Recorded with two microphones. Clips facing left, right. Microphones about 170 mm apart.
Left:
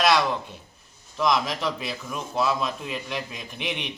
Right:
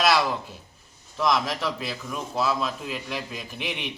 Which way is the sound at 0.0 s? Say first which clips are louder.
Left 1 dB; 5° right (ahead or behind).